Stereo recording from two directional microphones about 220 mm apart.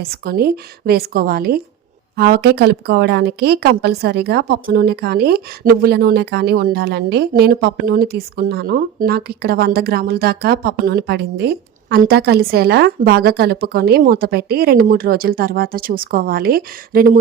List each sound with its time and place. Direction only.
0.0 s a woman's voice: 45° right (ahead or behind)